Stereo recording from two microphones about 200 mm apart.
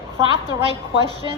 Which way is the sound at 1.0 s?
20° left (ahead or behind).